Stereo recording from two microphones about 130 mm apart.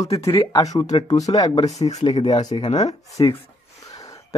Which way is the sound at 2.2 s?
35° left (ahead or behind).